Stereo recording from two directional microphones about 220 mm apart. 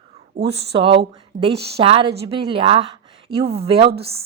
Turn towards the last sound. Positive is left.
turn(degrees=-25)  # may be behind; listen again after turning